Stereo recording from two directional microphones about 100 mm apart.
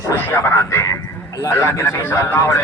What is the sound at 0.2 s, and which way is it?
Radio, 25° left (ahead or behind).